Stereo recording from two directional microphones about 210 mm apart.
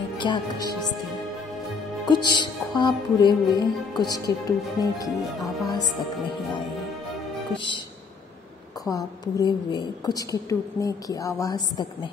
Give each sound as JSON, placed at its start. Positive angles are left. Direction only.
{"t": 0.2, "sound": "music", "side_deg": 20}
{"t": 2.0, "sound": "music", "side_deg": 20}
{"t": 4.1, "sound": "a woman's voice", "side_deg": 15}
{"t": 7.5, "sound": "music", "side_deg": 20}
{"t": 8.9, "sound": "a woman's voice", "side_deg": 20}